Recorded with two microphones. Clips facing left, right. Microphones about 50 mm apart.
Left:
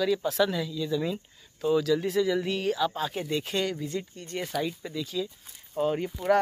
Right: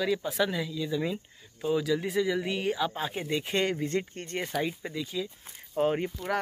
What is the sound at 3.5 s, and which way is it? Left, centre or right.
Speech, right.